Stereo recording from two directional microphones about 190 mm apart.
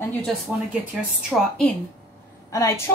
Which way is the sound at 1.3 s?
Centre (ahead or behind).